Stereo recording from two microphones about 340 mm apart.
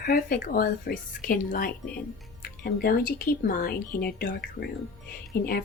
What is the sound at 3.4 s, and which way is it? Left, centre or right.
Speech, left.